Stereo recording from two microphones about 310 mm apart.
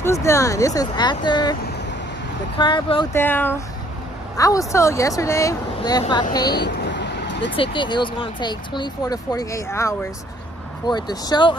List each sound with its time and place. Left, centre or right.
0.0 s speech: centre
6.4 s vehicle: left
7.5 s speech: centre